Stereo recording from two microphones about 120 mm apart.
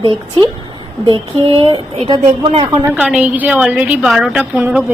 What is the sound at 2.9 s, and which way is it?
A woman's voice, 10° right (ahead or behind).